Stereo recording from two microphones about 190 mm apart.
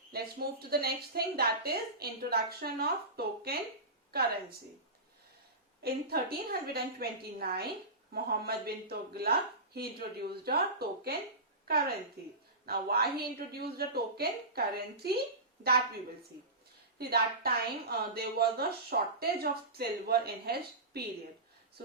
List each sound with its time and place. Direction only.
0.1 s a woman's voice: 55° right (ahead or behind)
5.8 s a woman's voice: 55° right (ahead or behind)
17.0 s a woman's voice: 55° right (ahead or behind)